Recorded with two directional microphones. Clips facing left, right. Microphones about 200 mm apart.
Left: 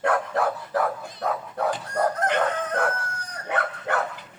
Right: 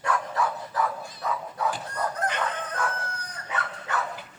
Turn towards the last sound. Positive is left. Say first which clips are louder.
# left 5 dB
turn(degrees=55)  # may be behind; listen again after turning